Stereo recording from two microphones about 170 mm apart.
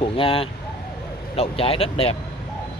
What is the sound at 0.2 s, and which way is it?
Speech, 30° left (ahead or behind).